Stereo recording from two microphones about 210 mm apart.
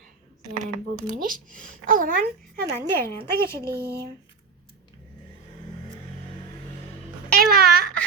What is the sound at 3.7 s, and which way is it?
Speech, 50° right (ahead or behind).